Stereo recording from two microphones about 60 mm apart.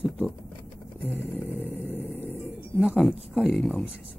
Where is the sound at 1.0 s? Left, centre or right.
Left.